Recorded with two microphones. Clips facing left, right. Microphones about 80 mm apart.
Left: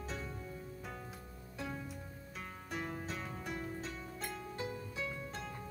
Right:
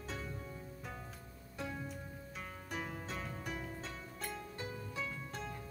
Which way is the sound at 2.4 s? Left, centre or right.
Centre.